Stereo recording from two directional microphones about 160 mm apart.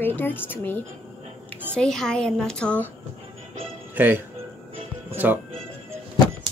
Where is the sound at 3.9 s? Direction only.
10° right (ahead or behind).